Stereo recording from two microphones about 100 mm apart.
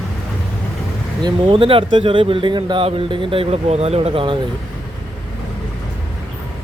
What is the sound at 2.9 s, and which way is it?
Speech, 60° right (ahead or behind).